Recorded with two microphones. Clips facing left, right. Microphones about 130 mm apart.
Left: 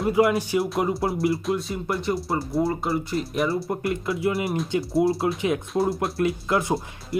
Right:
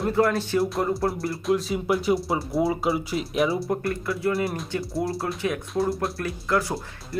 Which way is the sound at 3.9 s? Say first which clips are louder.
Left 1 dB; 25° left (ahead or behind).